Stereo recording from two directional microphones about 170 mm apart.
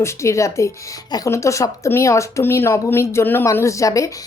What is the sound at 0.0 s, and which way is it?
A woman's voice, 15° left (ahead or behind).